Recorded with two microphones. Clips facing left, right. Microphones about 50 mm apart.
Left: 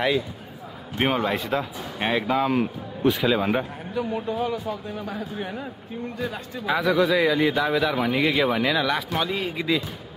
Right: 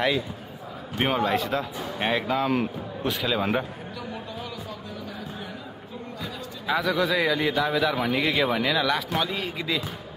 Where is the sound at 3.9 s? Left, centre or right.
Left.